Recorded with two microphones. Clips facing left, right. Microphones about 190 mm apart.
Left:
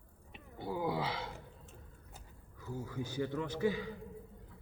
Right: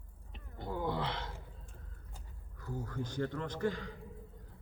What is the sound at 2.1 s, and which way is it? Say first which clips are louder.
Speech: even; 5° left (ahead or behind).